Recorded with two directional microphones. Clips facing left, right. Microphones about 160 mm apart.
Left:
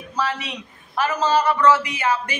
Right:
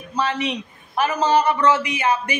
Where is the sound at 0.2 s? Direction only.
20° right (ahead or behind).